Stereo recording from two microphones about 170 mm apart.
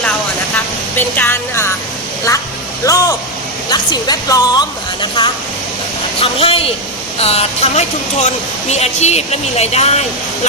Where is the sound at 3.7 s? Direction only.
25° left (ahead or behind).